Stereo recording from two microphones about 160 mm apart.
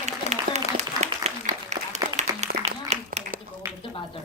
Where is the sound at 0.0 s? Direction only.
45° right (ahead or behind).